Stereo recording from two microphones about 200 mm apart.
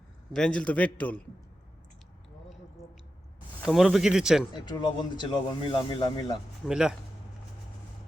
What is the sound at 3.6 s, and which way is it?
Speech, centre (ahead or behind).